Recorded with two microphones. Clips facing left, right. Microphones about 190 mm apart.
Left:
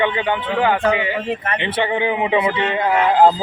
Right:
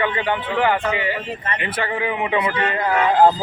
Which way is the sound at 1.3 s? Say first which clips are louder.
Left 5 dB; 65° left (ahead or behind).